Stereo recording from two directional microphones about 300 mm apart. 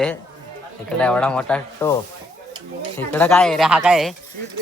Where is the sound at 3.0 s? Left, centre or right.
Centre.